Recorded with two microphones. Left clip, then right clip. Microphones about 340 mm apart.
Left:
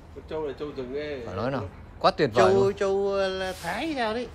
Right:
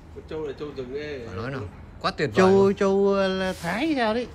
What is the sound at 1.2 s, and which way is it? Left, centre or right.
Speech, centre.